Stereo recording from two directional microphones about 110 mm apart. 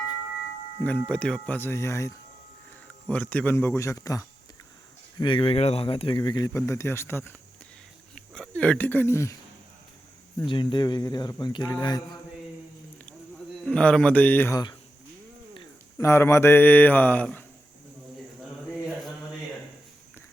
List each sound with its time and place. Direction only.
0.8 s speech: 10° left (ahead or behind); by 2.1 s 25° left (ahead or behind)
2.8 s speech: 10° left (ahead or behind); by 4.3 s 30° left (ahead or behind)
5.2 s speech: 50° left (ahead or behind)
6.1 s speech: 40° left (ahead or behind)
6.5 s speech: 30° left (ahead or behind)
8.1 s speech: 5° left (ahead or behind); by 9.4 s 25° left (ahead or behind)
10.5 s speech: 45° left (ahead or behind)
13.7 s speech: 10° left (ahead or behind)
14.5 s speech: 40° left (ahead or behind)
16.0 s speech: 25° left (ahead or behind)